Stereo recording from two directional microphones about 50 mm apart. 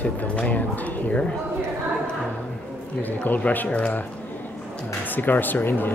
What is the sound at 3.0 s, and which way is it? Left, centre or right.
Speech, left.